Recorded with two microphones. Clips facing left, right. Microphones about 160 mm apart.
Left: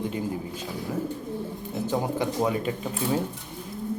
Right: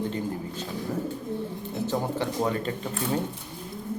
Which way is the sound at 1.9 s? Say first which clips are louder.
Left 2 dB; 10° left (ahead or behind).